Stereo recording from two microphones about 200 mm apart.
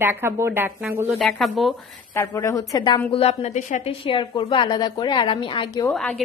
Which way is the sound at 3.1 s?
30° left (ahead or behind).